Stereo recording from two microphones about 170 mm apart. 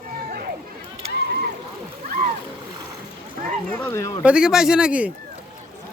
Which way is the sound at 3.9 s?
20° left (ahead or behind).